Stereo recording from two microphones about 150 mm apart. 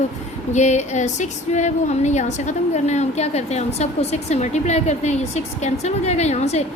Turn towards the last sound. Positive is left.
turn(degrees=45)  # may be behind; listen again after turning